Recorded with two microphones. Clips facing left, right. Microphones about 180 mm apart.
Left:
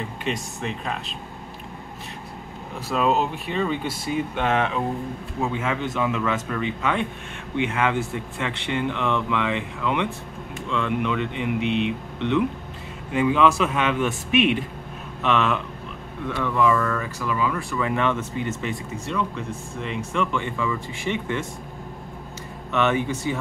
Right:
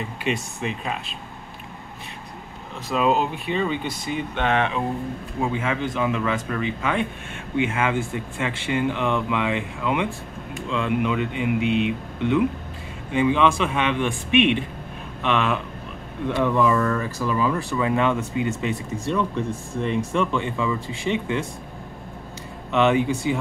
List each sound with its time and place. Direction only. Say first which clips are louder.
0.2 s speech: right 3 dB; 5° right (ahead or behind)
2.9 s speech: right 1 dB; centre (ahead or behind)
16.3 s speech: right 5 dB; 20° right (ahead or behind)
16.6 s speech: right 1 dB; 30° right (ahead or behind)
17.7 s speech: right 2 dB; 15° right (ahead or behind)
20.3 s speech: right 2 dB; 20° right (ahead or behind)
22.7 s speech: right 3 dB; 15° right (ahead or behind)